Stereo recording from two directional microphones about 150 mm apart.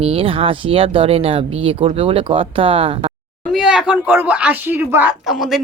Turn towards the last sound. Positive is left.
turn(degrees=0)  # may be behind; listen again after turning